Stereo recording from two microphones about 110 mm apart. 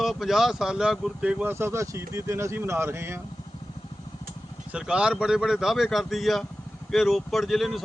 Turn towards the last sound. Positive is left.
turn(degrees=0)  # may be behind; listen again after turning